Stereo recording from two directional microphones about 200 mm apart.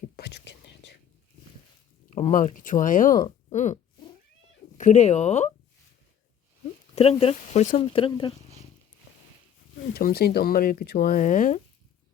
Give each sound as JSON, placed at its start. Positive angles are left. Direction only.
{"t": 0.2, "sound": "whispering", "side_deg": 55}
{"t": 2.0, "sound": "speech", "side_deg": 35}
{"t": 4.8, "sound": "speech", "side_deg": 35}
{"t": 6.9, "sound": "speech", "side_deg": 30}
{"t": 9.9, "sound": "speech", "side_deg": 50}